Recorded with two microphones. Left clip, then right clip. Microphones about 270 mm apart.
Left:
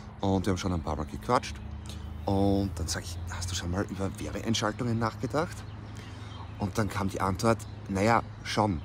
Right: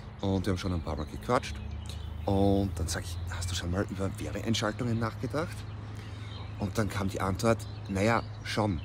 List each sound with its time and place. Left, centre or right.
0.2 s speech: centre
6.6 s speech: centre